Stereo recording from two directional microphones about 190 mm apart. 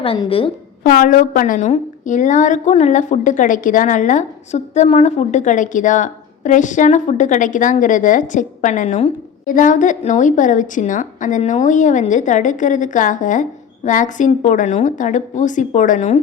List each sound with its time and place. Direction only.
0.0 s a woman's voice: 30° left (ahead or behind)
0.9 s a woman's voice: 45° left (ahead or behind)